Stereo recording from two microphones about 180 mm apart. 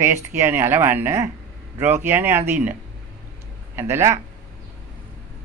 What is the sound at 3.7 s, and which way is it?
Speech, 15° right (ahead or behind).